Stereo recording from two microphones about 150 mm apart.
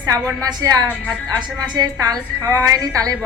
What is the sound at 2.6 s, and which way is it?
Speech, 25° right (ahead or behind).